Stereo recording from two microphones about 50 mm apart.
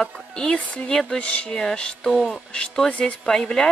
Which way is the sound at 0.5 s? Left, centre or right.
Left.